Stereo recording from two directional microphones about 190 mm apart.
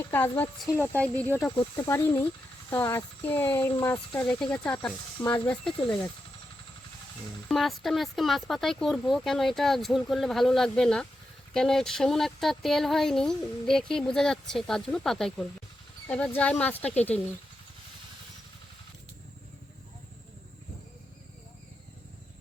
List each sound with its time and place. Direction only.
0.0 s speech: 10° left (ahead or behind)
7.4 s speech: centre (ahead or behind)